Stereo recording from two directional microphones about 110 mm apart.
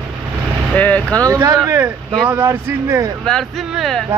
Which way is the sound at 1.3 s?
30° right (ahead or behind).